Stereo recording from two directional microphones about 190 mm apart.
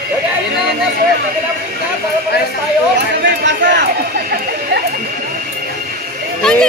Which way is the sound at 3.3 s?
65° right (ahead or behind).